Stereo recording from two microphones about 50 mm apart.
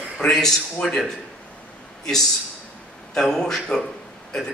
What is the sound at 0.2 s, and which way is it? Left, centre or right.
Speech, centre.